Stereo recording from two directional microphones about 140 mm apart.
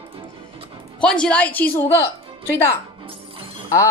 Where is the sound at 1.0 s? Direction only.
5° left (ahead or behind).